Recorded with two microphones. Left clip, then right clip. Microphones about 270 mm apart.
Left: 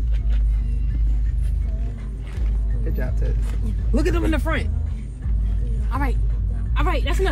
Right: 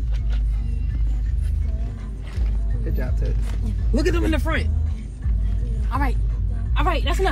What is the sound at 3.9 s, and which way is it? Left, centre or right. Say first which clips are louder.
Speech: even; left.